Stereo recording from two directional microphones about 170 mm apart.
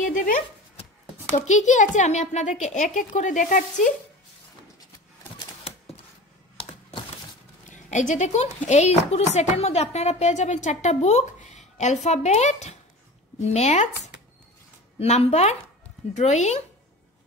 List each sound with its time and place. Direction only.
0.0 s a sound: 50° left (ahead or behind)
1.3 s a woman's voice: 45° left (ahead or behind)
6.6 s computer keyboard: 30° left (ahead or behind)
7.7 s a woman's voice: 45° left (ahead or behind)